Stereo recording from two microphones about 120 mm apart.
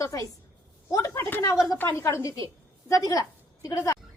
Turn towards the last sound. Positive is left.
turn(degrees=30)  # may be behind; listen again after turning